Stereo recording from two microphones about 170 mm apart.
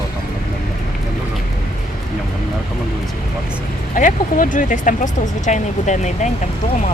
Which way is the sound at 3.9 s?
50° left (ahead or behind).